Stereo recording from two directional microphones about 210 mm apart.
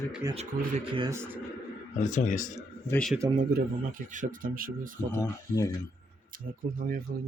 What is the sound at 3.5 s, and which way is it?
Speech, 40° right (ahead or behind).